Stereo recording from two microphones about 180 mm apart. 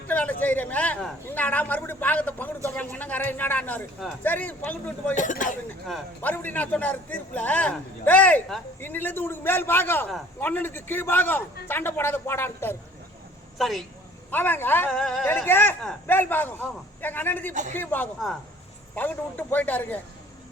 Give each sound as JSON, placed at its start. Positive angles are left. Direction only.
{"t": 0.1, "sound": "a man's voice", "side_deg": 10}
{"t": 5.1, "sound": "speech", "side_deg": 45}
{"t": 5.9, "sound": "a man's voice", "side_deg": 10}
{"t": 13.6, "sound": "a man's voice", "side_deg": 0}
{"t": 17.5, "sound": "a man's voice", "side_deg": -45}
{"t": 17.7, "sound": "a man's voice", "side_deg": 10}